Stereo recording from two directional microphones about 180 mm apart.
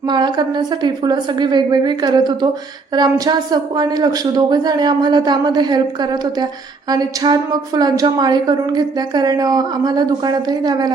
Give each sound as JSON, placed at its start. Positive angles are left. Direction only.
{"t": 0.0, "sound": "a woman's voice", "side_deg": -25}